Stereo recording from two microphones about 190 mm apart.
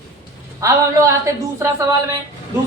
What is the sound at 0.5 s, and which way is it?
A woman's voice, 15° right (ahead or behind).